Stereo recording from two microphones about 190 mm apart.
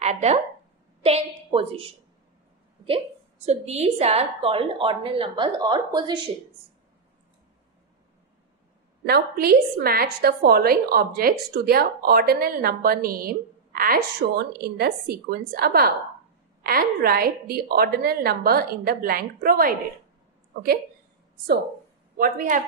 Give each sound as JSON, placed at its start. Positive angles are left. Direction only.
{"t": 0.0, "sound": "a woman's voice", "side_deg": -35}
{"t": 3.4, "sound": "a woman's voice", "side_deg": -35}
{"t": 9.0, "sound": "a woman's voice", "side_deg": -55}
{"t": 22.1, "sound": "a woman's voice", "side_deg": -50}